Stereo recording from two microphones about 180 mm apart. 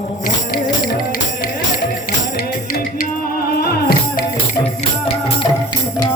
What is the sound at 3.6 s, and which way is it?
Music, 60° left (ahead or behind).